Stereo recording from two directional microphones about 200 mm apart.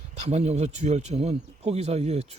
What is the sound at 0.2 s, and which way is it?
Speech, 35° right (ahead or behind).